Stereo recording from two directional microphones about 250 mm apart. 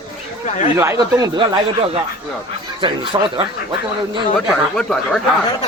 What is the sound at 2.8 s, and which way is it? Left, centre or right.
Speech, centre.